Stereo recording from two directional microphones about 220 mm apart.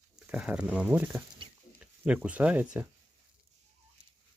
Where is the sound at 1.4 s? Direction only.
25° right (ahead or behind).